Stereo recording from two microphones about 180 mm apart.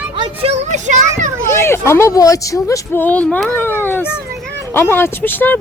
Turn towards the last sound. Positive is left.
turn(degrees=10)  # may be behind; listen again after turning